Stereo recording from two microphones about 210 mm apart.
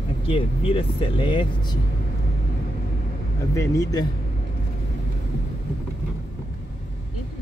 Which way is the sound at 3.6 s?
15° left (ahead or behind).